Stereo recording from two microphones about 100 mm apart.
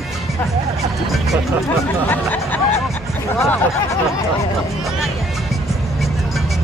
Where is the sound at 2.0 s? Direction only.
15° left (ahead or behind).